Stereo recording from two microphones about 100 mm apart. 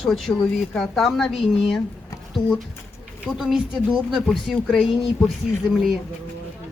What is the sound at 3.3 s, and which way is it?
Speech, 5° right (ahead or behind).